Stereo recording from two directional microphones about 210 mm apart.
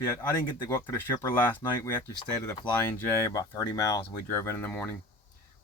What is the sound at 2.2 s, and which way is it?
Speech, 20° left (ahead or behind).